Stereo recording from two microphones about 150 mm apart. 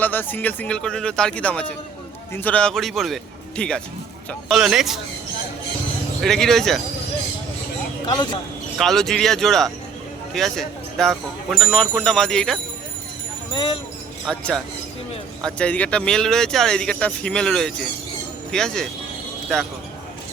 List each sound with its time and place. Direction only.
0.0 s speech: 15° left (ahead or behind); by 4.9 s 5° right (ahead or behind)
6.2 s speech: centre (ahead or behind)
8.0 s speech: 30° left (ahead or behind)
8.8 s speech: centre (ahead or behind)
13.5 s speech: 35° left (ahead or behind)
14.3 s speech: 5° left (ahead or behind)